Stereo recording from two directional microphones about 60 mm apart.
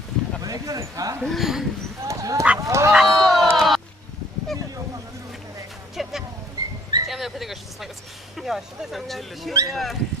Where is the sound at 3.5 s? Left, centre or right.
Centre.